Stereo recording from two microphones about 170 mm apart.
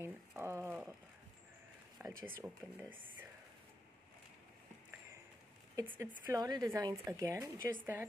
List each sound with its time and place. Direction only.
0.0 s a sound: 15° right (ahead or behind)
2.0 s speech: 15° right (ahead or behind)
5.8 s speech: 15° right (ahead or behind)